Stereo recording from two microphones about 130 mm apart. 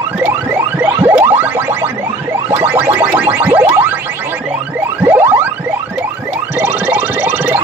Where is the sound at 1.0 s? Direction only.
15° right (ahead or behind).